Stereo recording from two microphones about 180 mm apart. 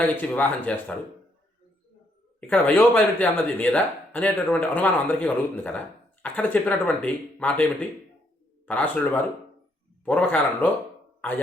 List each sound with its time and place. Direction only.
0.0 s speech: 10° left (ahead or behind)
2.4 s speech: 5° left (ahead or behind)
10.0 s speech: 10° left (ahead or behind)